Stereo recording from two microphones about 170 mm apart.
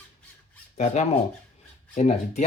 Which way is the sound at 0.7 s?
40° left (ahead or behind).